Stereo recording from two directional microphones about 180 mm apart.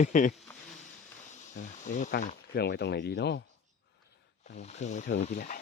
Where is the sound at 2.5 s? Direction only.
65° left (ahead or behind).